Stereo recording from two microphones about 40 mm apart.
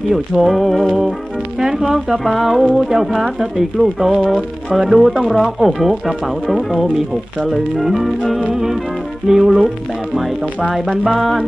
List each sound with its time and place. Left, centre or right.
0.1 s speech: centre
0.8 s music: centre
1.6 s speech: centre
4.4 s music: right
4.8 s music: centre
5.4 s speech: centre
9.3 s music: centre
10.7 s speech: centre